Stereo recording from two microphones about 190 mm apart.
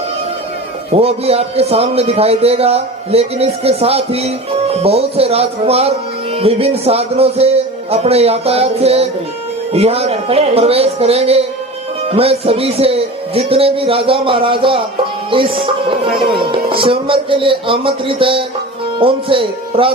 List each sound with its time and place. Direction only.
0.9 s a man's voice: 30° right (ahead or behind)